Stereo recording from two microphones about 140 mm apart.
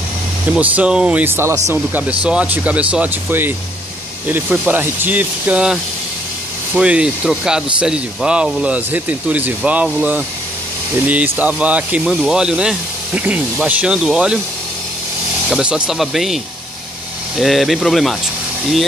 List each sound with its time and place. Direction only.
0.5 s speech: 10° right (ahead or behind)
15.5 s speech: 5° right (ahead or behind)
17.4 s speech: centre (ahead or behind)